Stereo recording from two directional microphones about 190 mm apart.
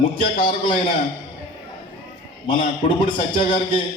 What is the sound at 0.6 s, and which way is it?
Speech, 25° left (ahead or behind).